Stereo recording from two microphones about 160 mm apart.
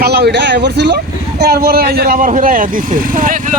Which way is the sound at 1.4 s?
75° right (ahead or behind).